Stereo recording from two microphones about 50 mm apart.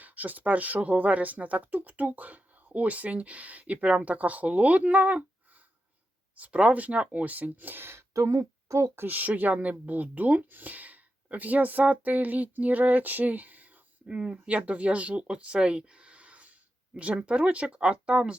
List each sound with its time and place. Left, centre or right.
0.0 s speech: right
6.3 s speech: right
8.1 s speech: right
9.0 s speech: right
14.1 s speech: right